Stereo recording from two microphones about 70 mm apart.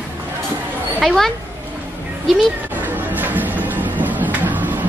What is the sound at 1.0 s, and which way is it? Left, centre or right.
Speech, centre.